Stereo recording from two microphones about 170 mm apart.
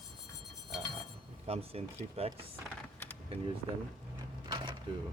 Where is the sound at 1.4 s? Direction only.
35° right (ahead or behind).